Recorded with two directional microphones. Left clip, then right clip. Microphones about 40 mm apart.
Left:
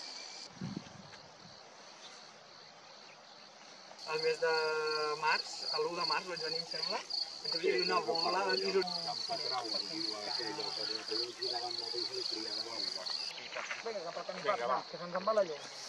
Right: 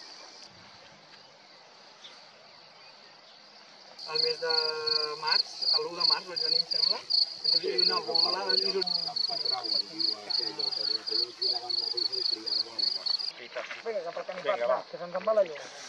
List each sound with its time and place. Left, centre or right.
4.0 s cricket: centre
4.3 s speech: centre
4.8 s speech: centre
7.1 s cricket: right
7.6 s speech: centre
8.8 s speech: centre
13.6 s speech: centre
15.4 s speech: right